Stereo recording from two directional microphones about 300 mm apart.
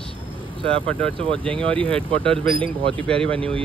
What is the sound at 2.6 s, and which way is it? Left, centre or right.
Speech, centre.